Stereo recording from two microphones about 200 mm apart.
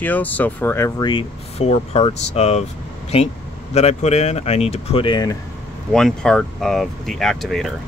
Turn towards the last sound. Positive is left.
turn(degrees=0)  # may be behind; listen again after turning